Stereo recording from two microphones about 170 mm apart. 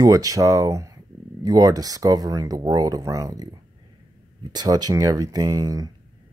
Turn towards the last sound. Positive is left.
turn(degrees=-20)  # may be behind; listen again after turning